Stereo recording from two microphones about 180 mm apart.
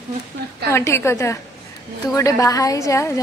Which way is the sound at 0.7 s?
15° left (ahead or behind).